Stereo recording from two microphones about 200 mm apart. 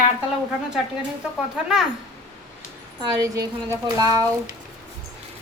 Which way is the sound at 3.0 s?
20° right (ahead or behind).